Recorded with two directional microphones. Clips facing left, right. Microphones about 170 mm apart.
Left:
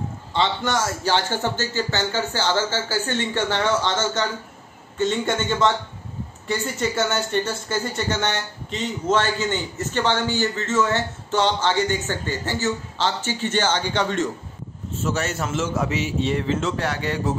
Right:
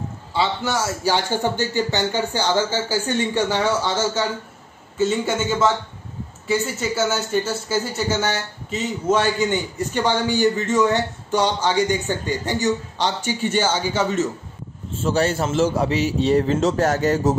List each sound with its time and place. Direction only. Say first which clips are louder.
0.3 s a man's voice: even; 10° right (ahead or behind)
15.0 s a man's voice: right 5 dB; 30° right (ahead or behind)